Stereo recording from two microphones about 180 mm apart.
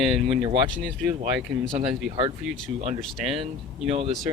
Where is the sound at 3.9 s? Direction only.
35° right (ahead or behind).